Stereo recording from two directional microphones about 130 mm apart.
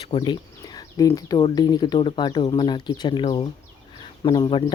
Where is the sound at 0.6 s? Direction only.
30° left (ahead or behind).